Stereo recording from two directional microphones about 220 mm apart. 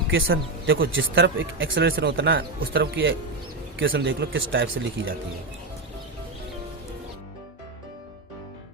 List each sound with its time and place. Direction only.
0.1 s a man's voice: 60° right (ahead or behind)
2.6 s speech: 45° right (ahead or behind); by 5.1 s 60° right (ahead or behind)